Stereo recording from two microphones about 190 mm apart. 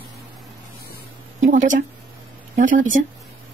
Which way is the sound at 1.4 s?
45° right (ahead or behind).